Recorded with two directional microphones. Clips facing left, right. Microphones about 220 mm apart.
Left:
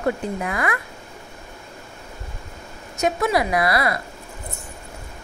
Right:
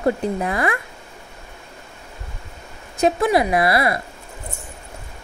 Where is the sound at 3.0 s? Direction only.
25° right (ahead or behind).